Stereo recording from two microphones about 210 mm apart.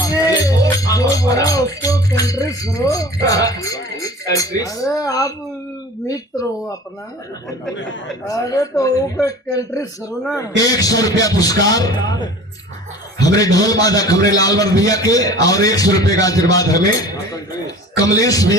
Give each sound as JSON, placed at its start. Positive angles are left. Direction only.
{"t": 0.0, "sound": "music", "side_deg": 15}
{"t": 3.2, "sound": "a man's voice", "side_deg": 15}
{"t": 8.3, "sound": "a man's voice", "side_deg": 15}
{"t": 18.0, "sound": "a man's voice", "side_deg": 15}